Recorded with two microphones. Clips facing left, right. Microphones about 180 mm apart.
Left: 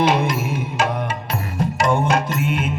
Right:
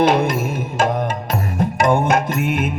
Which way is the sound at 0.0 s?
55° right (ahead or behind).